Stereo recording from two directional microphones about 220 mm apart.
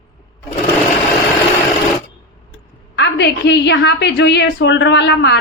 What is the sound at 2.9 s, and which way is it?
A woman's voice, 50° left (ahead or behind).